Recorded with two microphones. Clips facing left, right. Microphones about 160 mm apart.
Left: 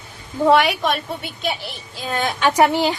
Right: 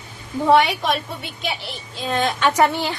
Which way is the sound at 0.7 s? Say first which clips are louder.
Left 1 dB; centre (ahead or behind).